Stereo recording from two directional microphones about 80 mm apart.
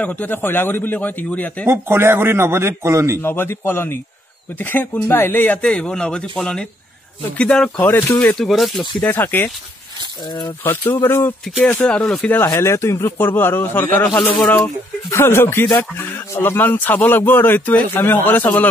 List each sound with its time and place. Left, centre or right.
0.0 s speech: centre
1.7 s a man's voice: right
3.2 s speech: left
5.6 s speech: centre
7.8 s speech: left
8.4 s speech: centre
9.0 s speech: left
10.6 s speech: left
11.9 s speech: centre
12.3 s speech: left